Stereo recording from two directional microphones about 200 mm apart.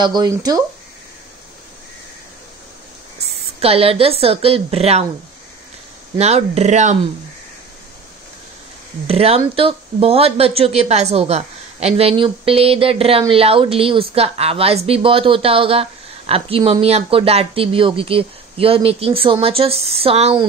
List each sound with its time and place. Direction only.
0.0 s a woman's voice: 20° right (ahead or behind)
3.5 s a woman's voice: 30° right (ahead or behind)
6.1 s speech: 30° right (ahead or behind)
9.0 s a woman's voice: 30° right (ahead or behind)